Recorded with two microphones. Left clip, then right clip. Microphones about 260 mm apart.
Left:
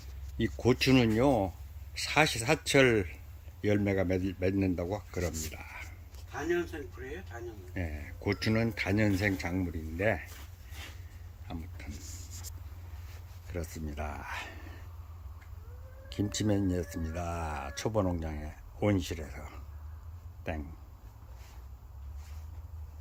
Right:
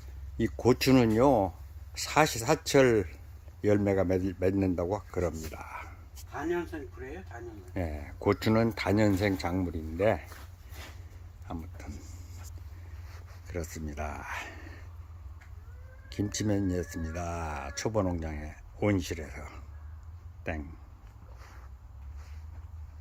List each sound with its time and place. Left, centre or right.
0.3 s speech: centre
6.3 s speech: right
7.7 s speech: centre
11.4 s a sound: centre
13.5 s speech: centre
16.0 s speech: centre